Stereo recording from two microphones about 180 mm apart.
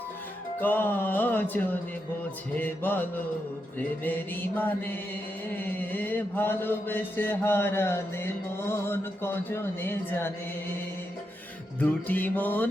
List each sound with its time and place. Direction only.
0.6 s mantra: 10° left (ahead or behind)
11.8 s mantra: 10° left (ahead or behind)